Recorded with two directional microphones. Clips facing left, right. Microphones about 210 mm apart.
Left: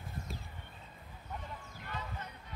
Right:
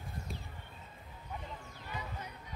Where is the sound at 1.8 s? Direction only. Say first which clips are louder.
Even; 10° right (ahead or behind).